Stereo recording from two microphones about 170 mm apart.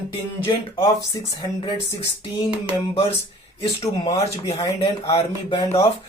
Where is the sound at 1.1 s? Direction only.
20° left (ahead or behind).